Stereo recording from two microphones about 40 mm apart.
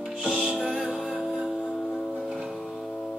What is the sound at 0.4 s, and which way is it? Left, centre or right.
Music, centre.